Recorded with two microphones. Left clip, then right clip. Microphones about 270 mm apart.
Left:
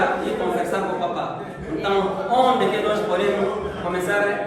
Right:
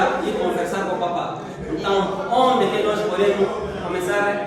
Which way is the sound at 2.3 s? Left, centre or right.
Centre.